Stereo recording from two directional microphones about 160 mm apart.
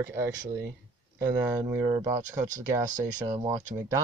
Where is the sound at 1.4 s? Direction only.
25° right (ahead or behind).